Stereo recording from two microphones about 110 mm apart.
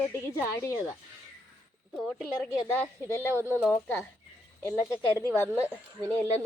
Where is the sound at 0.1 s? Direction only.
20° left (ahead or behind).